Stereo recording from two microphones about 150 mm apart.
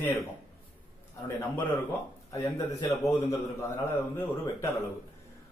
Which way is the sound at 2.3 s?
20° left (ahead or behind).